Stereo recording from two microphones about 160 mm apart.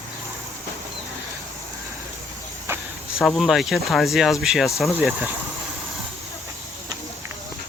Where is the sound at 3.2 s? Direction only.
5° left (ahead or behind).